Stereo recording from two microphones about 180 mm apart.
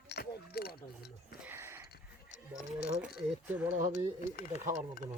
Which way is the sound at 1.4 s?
15° right (ahead or behind).